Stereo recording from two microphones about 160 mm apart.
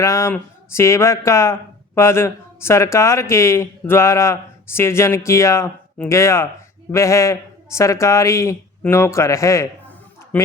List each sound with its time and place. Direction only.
0.0 s a man's voice: 20° left (ahead or behind)